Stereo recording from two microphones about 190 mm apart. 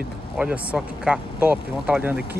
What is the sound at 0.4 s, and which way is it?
Speech, 5° right (ahead or behind).